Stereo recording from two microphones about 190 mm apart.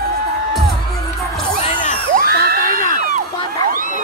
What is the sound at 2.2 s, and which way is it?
Children shouting, 55° right (ahead or behind).